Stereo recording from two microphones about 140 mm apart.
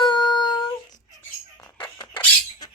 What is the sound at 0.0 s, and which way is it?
Dog, 30° left (ahead or behind).